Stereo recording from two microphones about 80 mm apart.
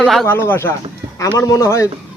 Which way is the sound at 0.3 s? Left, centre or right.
Left.